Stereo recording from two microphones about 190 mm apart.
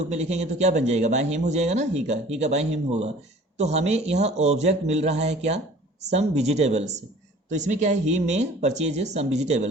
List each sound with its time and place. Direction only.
0.1 s speech: 35° right (ahead or behind)